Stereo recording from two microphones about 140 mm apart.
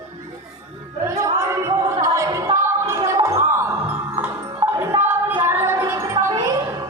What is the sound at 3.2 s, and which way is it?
Music, 20° right (ahead or behind).